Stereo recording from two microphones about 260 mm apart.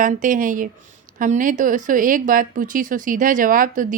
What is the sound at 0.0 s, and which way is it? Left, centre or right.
Speech, right.